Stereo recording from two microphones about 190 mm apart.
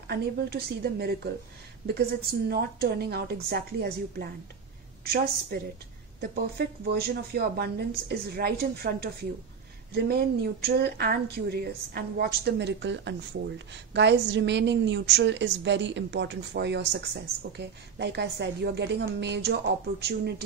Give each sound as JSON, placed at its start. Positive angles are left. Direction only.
{"t": 0.1, "sound": "a woman's voice", "side_deg": -55}